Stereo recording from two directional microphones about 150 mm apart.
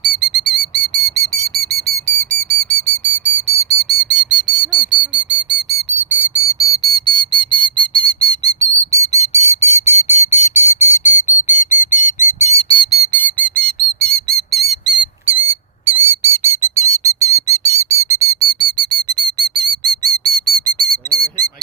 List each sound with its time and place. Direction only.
0.2 s whistle: 5° right (ahead or behind); by 3.3 s 15° left (ahead or behind)
4.1 s bird: 5° right (ahead or behind)
4.7 s a sound: 5° right (ahead or behind)
5.1 s whistle: 10° right (ahead or behind)
6.3 s whistle: 20° left (ahead or behind); by 12.9 s 35° left (ahead or behind)
12.9 s a sound: 20° left (ahead or behind); by 14.9 s centre (ahead or behind)
15.9 s bird: 15° right (ahead or behind); by 19.9 s 30° right (ahead or behind)
20.0 s whistle: 25° right (ahead or behind)